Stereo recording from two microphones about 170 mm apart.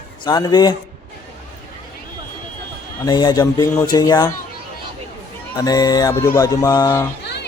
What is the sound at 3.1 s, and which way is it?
Speech, 25° left (ahead or behind).